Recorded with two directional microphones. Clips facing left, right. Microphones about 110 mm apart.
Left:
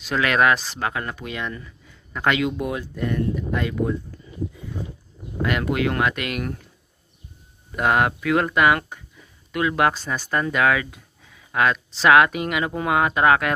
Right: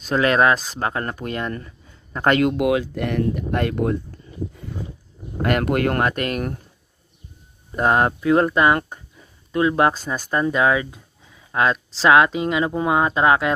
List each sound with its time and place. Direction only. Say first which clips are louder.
0.0 s speech: right 3 dB; 35° right (ahead or behind)
2.5 s speech: right 8 dB; 85° right; by 4.0 s 60° right (ahead or behind)
5.4 s speech: right 3 dB; 50° right (ahead or behind)
7.7 s speech: right 2 dB; 35° right (ahead or behind)
9.9 s speech: right 1 dB; 10° right (ahead or behind)
10.3 s speech: right 2 dB; 25° right (ahead or behind)